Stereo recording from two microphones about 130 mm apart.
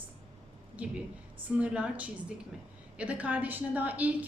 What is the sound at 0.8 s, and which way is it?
A woman's voice, 10° right (ahead or behind).